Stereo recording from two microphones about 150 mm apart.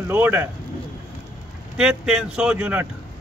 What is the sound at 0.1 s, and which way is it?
Speech, 15° right (ahead or behind).